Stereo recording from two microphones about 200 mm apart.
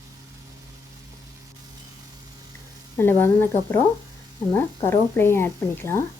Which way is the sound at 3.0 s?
10° left (ahead or behind).